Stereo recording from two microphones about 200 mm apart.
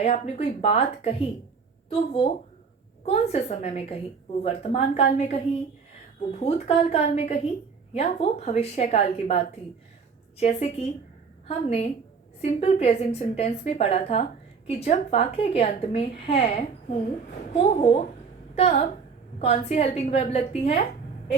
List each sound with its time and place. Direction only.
0.0 s a woman's voice: 30° left (ahead or behind)
10.4 s a woman's voice: 35° left (ahead or behind)
17.5 s a woman's voice: 30° left (ahead or behind)